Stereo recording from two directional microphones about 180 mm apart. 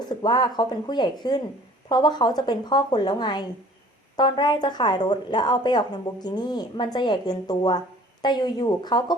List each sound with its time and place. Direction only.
0.2 s a woman's voice: 25° left (ahead or behind)